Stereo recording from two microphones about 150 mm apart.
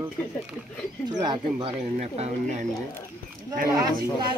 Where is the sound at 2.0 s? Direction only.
45° right (ahead or behind).